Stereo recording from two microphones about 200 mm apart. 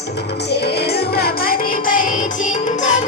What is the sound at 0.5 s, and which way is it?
Music, 55° left (ahead or behind).